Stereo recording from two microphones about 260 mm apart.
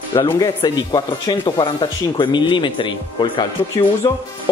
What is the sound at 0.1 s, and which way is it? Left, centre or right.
Speech, centre.